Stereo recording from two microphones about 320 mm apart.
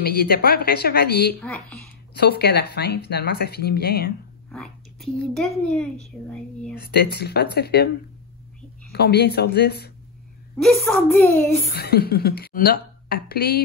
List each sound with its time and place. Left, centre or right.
0.0 s speech: left
4.5 s a child's voice: centre
6.8 s speech: left
8.9 s speech: left
10.6 s a child's voice: centre
11.7 s speech: left